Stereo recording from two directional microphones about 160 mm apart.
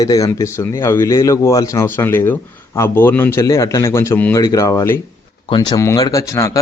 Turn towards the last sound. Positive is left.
turn(degrees=20)  # may be behind; listen again after turning